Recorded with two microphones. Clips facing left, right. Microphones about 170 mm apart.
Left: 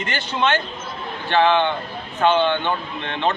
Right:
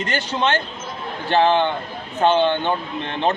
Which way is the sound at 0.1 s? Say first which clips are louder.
Even; 35° right (ahead or behind).